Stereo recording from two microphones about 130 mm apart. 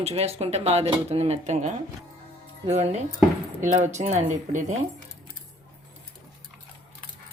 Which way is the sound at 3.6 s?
65° right (ahead or behind).